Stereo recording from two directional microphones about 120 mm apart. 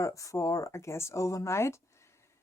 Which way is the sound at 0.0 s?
25° left (ahead or behind).